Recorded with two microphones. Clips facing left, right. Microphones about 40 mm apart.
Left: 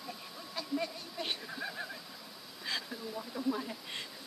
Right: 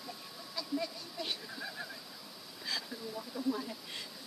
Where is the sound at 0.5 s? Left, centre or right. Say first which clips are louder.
Left 1 dB; left.